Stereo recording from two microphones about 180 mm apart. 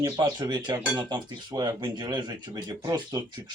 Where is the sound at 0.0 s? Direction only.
20° right (ahead or behind).